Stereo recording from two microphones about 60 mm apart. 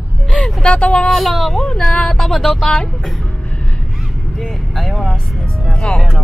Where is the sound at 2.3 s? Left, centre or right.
Centre.